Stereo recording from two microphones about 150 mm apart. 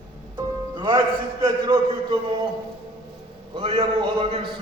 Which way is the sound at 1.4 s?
30° right (ahead or behind).